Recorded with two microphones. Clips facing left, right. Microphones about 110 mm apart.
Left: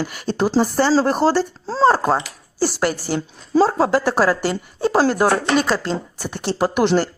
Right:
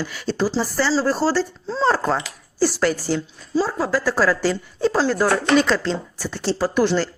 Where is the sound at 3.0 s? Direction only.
50° left (ahead or behind).